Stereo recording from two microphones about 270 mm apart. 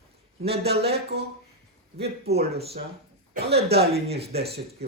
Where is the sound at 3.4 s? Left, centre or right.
Right.